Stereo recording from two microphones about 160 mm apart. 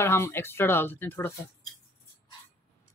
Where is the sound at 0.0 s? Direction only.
15° left (ahead or behind).